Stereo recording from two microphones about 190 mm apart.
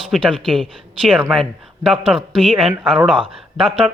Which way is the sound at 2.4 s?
30° right (ahead or behind).